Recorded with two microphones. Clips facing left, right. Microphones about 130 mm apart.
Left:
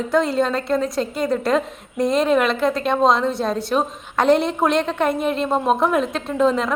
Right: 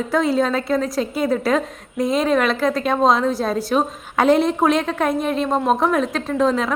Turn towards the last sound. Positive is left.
turn(degrees=0)  # may be behind; listen again after turning